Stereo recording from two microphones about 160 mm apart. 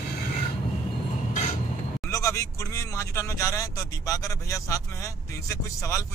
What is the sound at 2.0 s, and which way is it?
Speech, 20° left (ahead or behind).